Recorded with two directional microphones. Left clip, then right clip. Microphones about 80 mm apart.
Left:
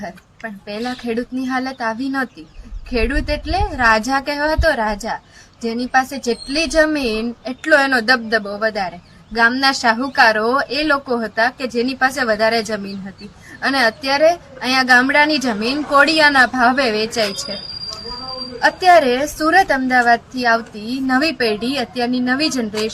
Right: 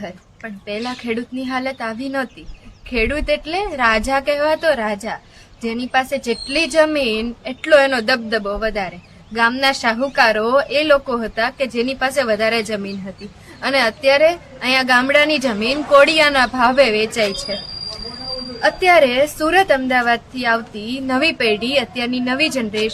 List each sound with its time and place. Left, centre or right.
1.4 s a woman's voice: left
9.7 s a woman's voice: centre
10.2 s a woman's voice: left
18.6 s a woman's voice: left